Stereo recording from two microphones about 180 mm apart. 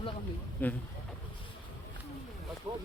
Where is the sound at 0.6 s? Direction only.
10° left (ahead or behind).